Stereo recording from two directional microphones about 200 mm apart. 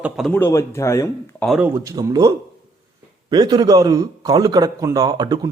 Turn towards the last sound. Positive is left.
turn(degrees=-20)  # may be behind; listen again after turning